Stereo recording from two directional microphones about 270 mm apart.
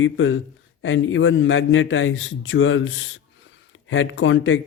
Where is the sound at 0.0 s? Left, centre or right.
Left.